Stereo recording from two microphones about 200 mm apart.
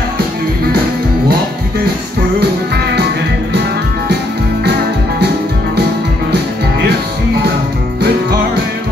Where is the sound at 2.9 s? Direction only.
55° right (ahead or behind).